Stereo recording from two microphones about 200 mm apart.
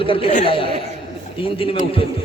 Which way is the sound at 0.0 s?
25° left (ahead or behind).